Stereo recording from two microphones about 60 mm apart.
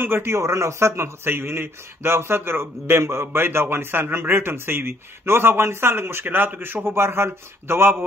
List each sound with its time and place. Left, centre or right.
0.0 s a man's voice: right